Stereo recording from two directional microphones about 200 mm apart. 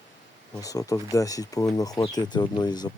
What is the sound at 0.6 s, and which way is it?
Speech, 15° left (ahead or behind).